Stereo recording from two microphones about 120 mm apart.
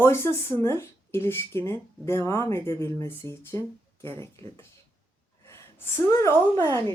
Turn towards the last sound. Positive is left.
turn(degrees=30)  # may be behind; listen again after turning